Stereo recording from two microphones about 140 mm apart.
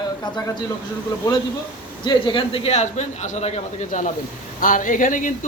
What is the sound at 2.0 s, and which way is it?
A man's voice, 35° left (ahead or behind).